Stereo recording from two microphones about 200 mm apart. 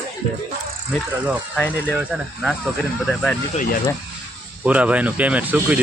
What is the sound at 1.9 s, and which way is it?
Speech, 5° right (ahead or behind).